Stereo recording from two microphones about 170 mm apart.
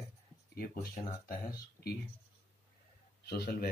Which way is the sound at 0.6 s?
60° left (ahead or behind).